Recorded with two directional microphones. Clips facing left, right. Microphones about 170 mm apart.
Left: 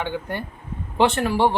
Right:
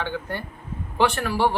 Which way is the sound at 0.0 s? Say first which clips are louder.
Left 2 dB; 15° left (ahead or behind).